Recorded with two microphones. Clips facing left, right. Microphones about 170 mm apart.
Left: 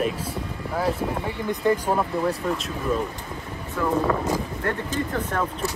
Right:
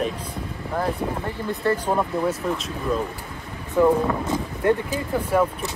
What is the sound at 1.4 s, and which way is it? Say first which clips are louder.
Speech: left 1 dB; 15° left (ahead or behind).